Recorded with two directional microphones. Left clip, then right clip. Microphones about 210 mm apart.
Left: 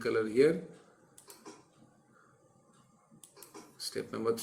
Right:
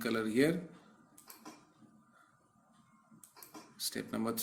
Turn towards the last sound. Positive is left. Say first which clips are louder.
# left 4 dB
turn(degrees=-35)  # may be behind; listen again after turning